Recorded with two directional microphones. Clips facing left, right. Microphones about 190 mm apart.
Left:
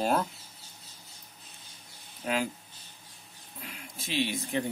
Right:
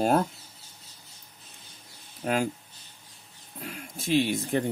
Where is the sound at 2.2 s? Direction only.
50° right (ahead or behind).